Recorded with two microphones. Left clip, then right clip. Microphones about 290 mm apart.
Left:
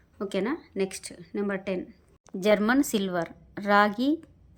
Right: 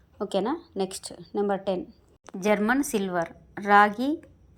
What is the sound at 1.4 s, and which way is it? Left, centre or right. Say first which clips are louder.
A woman's voice: right 4 dB; centre.